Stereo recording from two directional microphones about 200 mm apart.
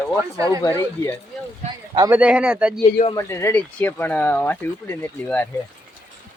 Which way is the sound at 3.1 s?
15° left (ahead or behind).